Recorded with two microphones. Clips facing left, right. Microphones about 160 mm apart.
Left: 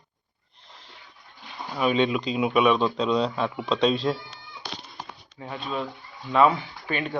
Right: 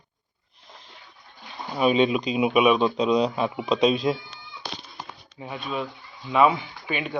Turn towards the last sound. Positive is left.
turn(degrees=-10)  # may be behind; listen again after turning